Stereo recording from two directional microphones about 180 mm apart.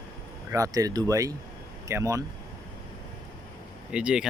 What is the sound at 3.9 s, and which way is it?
Speech, 5° right (ahead or behind).